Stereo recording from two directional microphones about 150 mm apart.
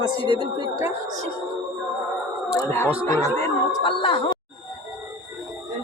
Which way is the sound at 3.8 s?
35° left (ahead or behind).